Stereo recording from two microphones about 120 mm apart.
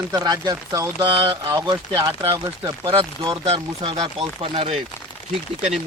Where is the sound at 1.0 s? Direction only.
40° right (ahead or behind).